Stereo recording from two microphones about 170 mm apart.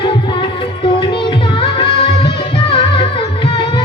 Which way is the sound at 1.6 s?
35° left (ahead or behind).